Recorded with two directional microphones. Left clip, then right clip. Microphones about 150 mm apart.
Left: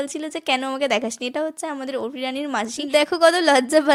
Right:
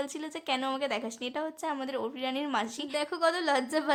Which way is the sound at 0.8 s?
40° left (ahead or behind).